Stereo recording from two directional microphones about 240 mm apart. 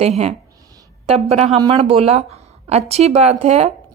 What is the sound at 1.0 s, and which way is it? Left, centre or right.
Speech, right.